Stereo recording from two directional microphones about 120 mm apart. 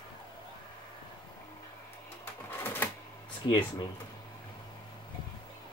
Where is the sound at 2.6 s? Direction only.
15° left (ahead or behind).